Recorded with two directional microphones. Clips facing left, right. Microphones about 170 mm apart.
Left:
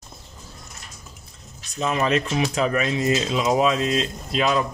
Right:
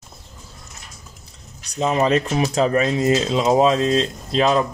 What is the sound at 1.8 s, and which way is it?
Speech, 30° right (ahead or behind).